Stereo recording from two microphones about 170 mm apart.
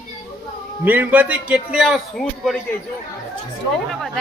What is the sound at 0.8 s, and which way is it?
A man's voice, 10° right (ahead or behind).